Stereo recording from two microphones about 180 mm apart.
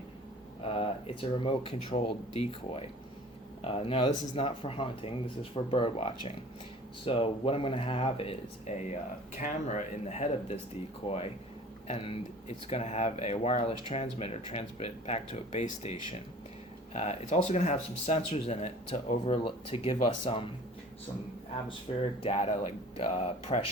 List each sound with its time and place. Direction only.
0.6 s speech: 30° left (ahead or behind)
21.9 s speech: 30° left (ahead or behind)